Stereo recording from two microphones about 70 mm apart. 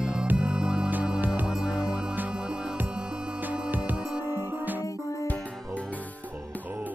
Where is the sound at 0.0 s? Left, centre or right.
Centre.